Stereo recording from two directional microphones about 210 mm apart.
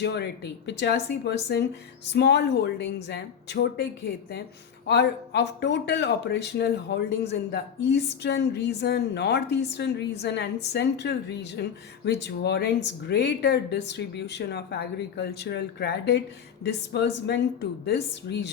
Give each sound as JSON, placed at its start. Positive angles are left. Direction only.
{"t": 0.0, "sound": "speech", "side_deg": 55}
{"t": 4.9, "sound": "speech", "side_deg": 55}